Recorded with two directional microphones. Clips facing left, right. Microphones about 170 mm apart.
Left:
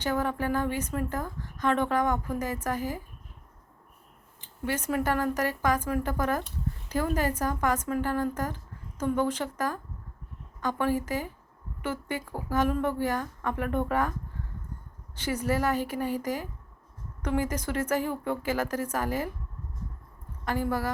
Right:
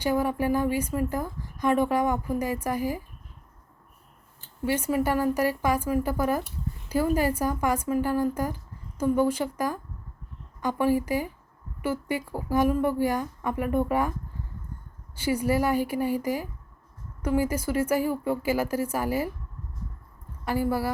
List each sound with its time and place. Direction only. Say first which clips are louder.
0.0 s speech: right 4 dB; 10° right (ahead or behind)
4.6 s speech: right 3 dB; 10° right (ahead or behind)
15.1 s speech: right 4 dB; 10° right (ahead or behind)
20.4 s speech: right 3 dB; 10° right (ahead or behind)